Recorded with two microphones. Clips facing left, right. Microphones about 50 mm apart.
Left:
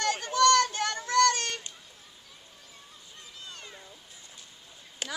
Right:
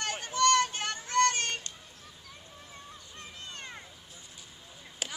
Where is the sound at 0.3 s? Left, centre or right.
Left.